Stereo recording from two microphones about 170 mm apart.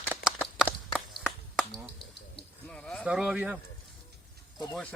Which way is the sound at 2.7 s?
5° left (ahead or behind).